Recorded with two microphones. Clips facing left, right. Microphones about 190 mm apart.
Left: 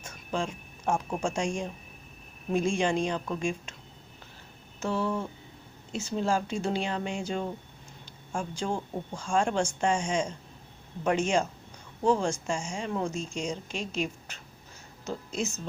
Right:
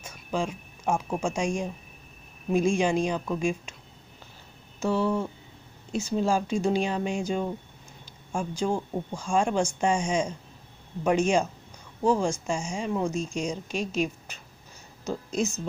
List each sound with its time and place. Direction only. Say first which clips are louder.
0.0 s speech: right 2 dB; 10° right (ahead or behind)
4.8 s speech: right 4 dB; 10° right (ahead or behind)